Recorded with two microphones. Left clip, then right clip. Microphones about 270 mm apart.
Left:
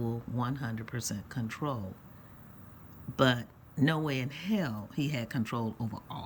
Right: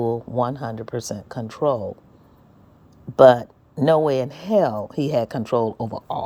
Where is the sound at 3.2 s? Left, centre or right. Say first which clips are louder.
Right 17 dB; centre.